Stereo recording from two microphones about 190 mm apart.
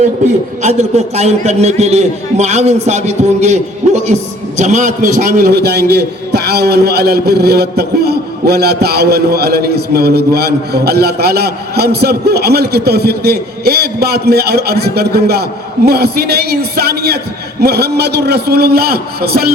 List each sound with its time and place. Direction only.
0.6 s a man's voice: 35° right (ahead or behind)
5.4 s a man's voice: 60° right (ahead or behind)